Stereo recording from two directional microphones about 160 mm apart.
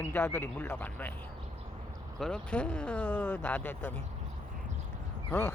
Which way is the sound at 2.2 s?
5° left (ahead or behind).